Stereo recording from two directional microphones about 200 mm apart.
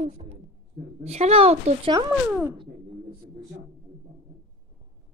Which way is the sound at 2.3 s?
10° right (ahead or behind).